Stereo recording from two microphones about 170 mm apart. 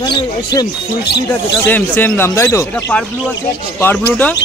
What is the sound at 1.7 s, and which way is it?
Speech, 10° left (ahead or behind).